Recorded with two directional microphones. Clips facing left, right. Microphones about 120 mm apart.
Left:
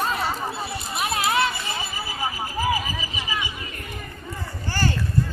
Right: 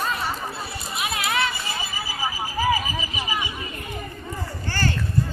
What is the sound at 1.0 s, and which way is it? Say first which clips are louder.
Run: left 3 dB; 30° left (ahead or behind).